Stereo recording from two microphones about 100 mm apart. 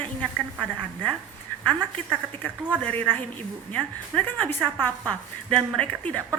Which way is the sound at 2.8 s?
15° left (ahead or behind).